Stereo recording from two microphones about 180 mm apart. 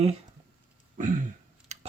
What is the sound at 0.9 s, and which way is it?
Throat clearing, 45° right (ahead or behind).